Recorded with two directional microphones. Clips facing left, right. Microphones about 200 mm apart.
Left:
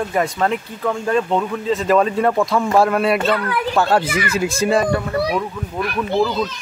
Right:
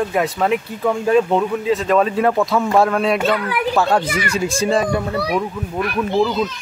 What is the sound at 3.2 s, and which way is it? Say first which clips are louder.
Speech: even; 15° right (ahead or behind).